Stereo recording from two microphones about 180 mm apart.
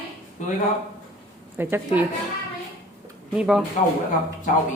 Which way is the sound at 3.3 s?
5° right (ahead or behind).